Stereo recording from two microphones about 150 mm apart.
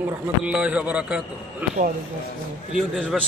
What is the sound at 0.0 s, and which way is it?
A man's voice, 5° right (ahead or behind).